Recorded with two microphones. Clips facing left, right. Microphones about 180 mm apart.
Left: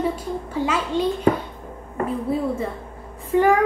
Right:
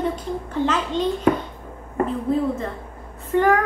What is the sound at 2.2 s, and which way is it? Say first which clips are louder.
A woman's voice: right 1 dB; 10° left (ahead or behind).